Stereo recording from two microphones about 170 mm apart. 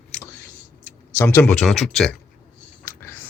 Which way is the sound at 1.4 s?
5° left (ahead or behind).